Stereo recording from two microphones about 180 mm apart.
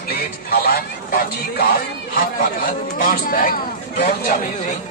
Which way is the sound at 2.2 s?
55° left (ahead or behind).